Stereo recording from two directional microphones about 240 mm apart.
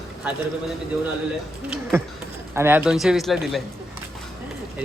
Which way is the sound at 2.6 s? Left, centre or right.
Centre.